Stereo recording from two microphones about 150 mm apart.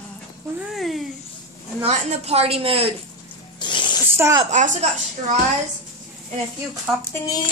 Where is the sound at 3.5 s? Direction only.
30° left (ahead or behind).